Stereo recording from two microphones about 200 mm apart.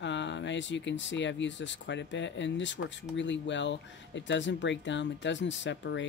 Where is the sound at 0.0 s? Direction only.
65° left (ahead or behind).